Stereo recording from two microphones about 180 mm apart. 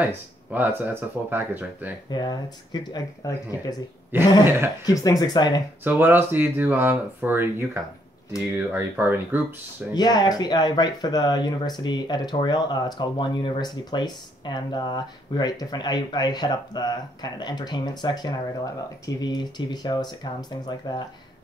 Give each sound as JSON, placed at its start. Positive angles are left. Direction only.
{"t": 0.0, "sound": "speech", "side_deg": -10}
{"t": 2.0, "sound": "speech", "side_deg": 25}
{"t": 4.1, "sound": "speech", "side_deg": -10}
{"t": 4.8, "sound": "speech", "side_deg": 20}
{"t": 5.9, "sound": "speech", "side_deg": -10}
{"t": 9.9, "sound": "speech", "side_deg": 20}